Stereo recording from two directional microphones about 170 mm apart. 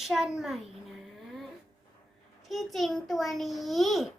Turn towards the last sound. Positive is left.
turn(degrees=0)  # may be behind; listen again after turning